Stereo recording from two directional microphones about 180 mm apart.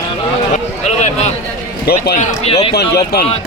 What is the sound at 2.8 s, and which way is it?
Speech, 60° left (ahead or behind).